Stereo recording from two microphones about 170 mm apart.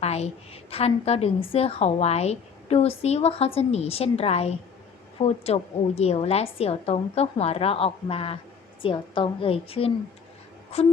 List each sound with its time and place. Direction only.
0.0 s a woman's voice: 40° left (ahead or behind)